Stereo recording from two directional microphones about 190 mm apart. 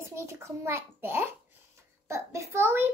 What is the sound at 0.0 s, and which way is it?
A child's voice, 15° right (ahead or behind).